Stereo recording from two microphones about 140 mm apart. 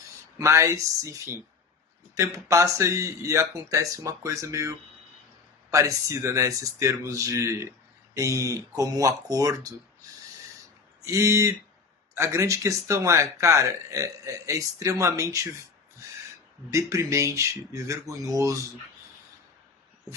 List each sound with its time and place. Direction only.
0.3 s speech: 20° right (ahead or behind)
5.7 s speech: 25° right (ahead or behind)
11.0 s speech: 20° right (ahead or behind)
16.7 s speech: 20° right (ahead or behind)